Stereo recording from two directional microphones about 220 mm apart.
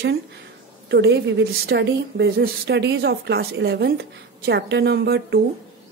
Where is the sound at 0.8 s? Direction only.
50° right (ahead or behind).